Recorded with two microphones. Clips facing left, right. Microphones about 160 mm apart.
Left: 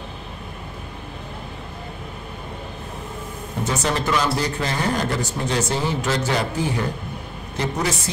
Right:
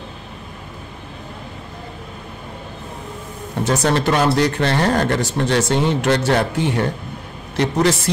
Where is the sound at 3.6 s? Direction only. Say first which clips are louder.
Right 6 dB; 75° right (ahead or behind).